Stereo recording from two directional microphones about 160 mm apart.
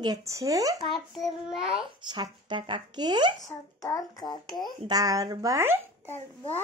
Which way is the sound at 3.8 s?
20° left (ahead or behind).